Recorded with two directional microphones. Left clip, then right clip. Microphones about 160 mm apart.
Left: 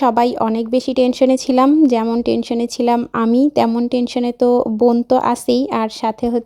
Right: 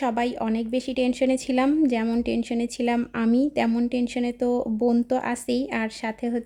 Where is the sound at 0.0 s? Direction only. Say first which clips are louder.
Left 11 dB; 35° left (ahead or behind).